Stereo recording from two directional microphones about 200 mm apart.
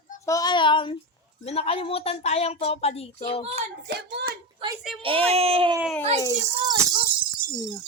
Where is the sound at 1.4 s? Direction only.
30° left (ahead or behind).